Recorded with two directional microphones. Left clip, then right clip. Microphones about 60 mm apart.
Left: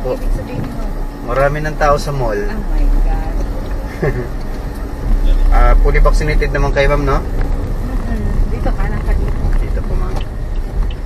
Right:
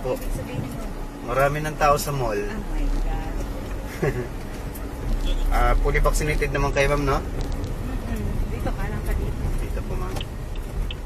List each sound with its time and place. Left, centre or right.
1.3 s speech: right
5.5 s speech: right